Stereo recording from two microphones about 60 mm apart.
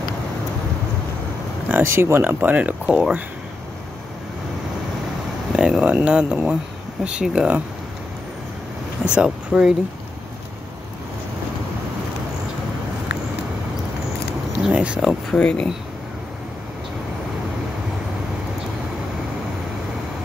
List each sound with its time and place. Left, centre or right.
1.7 s speech: right; by 3.2 s centre
5.5 s speech: centre
9.0 s speech: centre
9.5 s speech: centre
14.7 s speech: centre
15.3 s speech: centre